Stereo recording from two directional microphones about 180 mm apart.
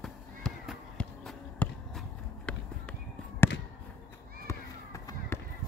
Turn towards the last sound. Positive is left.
turn(degrees=15)  # may be behind; listen again after turning